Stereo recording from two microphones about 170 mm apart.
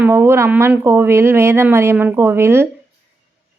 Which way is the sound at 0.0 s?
15° right (ahead or behind).